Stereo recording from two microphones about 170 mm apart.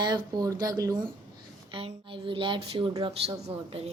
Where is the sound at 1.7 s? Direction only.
35° right (ahead or behind).